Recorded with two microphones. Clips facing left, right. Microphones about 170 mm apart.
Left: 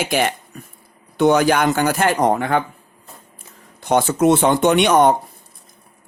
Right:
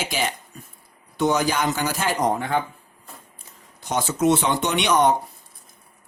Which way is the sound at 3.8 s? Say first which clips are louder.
Left 6 dB; 60° left (ahead or behind).